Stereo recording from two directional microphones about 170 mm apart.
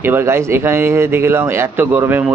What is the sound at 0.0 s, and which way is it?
Speech, 15° right (ahead or behind).